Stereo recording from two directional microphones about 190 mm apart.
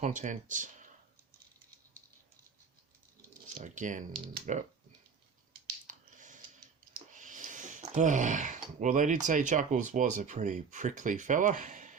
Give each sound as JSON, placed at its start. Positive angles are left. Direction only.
{"t": 0.0, "sound": "speech", "side_deg": -40}
{"t": 3.6, "sound": "speech", "side_deg": -40}
{"t": 5.9, "sound": "a sound", "side_deg": -40}
{"t": 8.8, "sound": "speech", "side_deg": -40}